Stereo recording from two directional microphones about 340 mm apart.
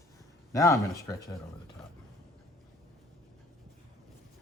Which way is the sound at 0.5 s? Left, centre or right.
Centre.